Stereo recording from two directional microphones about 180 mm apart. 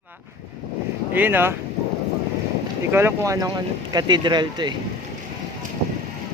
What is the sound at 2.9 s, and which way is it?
Speech, 15° right (ahead or behind).